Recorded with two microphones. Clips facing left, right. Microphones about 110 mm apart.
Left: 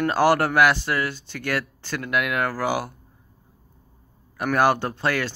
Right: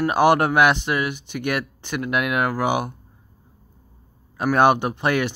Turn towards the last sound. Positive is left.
turn(degrees=-20)  # may be behind; listen again after turning